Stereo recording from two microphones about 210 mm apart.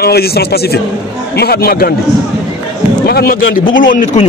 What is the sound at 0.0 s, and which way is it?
A man's voice, 50° left (ahead or behind).